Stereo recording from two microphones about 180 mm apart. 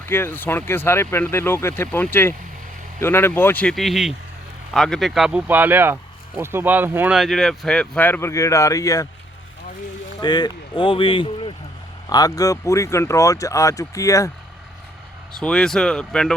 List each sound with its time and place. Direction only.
0.0 s speech: 10° left (ahead or behind)
10.2 s speech: 25° left (ahead or behind)
15.3 s speech: 5° left (ahead or behind)